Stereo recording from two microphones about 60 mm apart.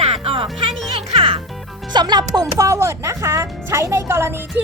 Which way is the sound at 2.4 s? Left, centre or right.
Right.